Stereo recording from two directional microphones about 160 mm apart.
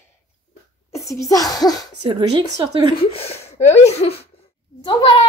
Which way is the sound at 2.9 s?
35° left (ahead or behind).